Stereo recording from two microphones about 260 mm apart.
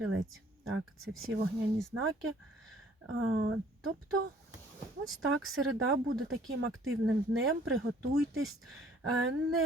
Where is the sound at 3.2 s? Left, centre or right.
Right.